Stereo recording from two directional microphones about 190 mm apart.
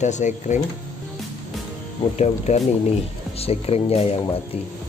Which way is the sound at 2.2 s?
35° left (ahead or behind).